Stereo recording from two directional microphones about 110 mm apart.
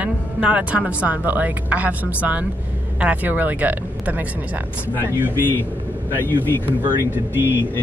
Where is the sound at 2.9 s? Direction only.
15° right (ahead or behind).